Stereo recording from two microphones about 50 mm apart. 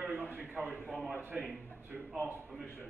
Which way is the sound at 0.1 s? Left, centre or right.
Right.